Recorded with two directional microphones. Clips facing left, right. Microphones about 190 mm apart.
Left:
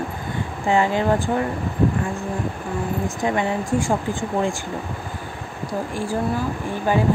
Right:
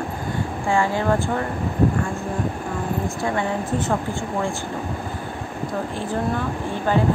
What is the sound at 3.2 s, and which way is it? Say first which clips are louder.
Speech: left 4 dB; 15° left (ahead or behind).